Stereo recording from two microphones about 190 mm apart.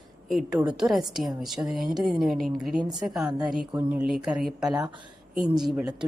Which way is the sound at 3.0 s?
Centre (ahead or behind).